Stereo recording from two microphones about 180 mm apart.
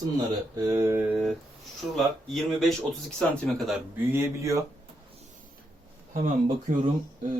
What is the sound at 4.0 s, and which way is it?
Speech, 15° right (ahead or behind).